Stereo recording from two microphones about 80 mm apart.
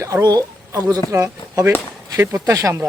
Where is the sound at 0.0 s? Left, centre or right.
Right.